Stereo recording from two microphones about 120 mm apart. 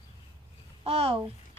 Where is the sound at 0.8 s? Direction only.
55° right (ahead or behind).